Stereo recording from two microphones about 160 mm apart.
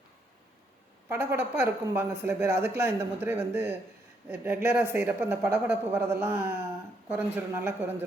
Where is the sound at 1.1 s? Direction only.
15° right (ahead or behind).